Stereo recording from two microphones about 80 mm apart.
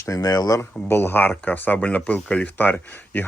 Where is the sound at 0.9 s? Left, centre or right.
Left; by 2.5 s centre.